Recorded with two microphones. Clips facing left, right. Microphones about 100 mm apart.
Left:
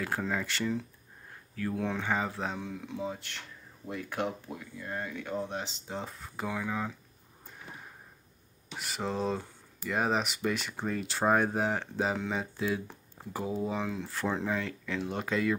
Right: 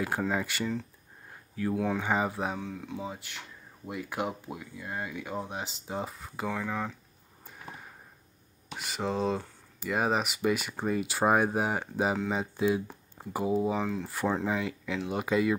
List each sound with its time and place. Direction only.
0.3 s speech: 10° right (ahead or behind)
2.0 s speech: 15° right (ahead or behind)
2.6 s speech: centre (ahead or behind)
8.7 s speech: centre (ahead or behind)
13.7 s speech: centre (ahead or behind)